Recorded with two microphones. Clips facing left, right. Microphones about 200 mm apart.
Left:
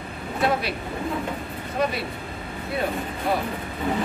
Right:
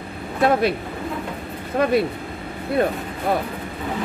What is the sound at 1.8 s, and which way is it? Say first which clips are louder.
Speech: right 5 dB; 55° right (ahead or behind).